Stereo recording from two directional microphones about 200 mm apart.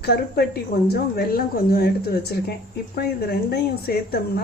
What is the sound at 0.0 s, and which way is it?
A woman's voice, 55° left (ahead or behind).